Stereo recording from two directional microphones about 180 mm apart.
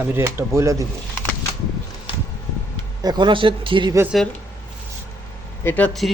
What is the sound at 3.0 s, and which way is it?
Speech, 25° right (ahead or behind).